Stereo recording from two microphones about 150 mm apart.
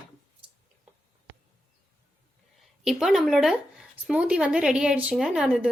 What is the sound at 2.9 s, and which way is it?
Speech, 5° right (ahead or behind).